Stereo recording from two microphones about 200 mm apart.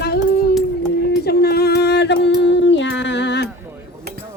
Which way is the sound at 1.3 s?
50° left (ahead or behind).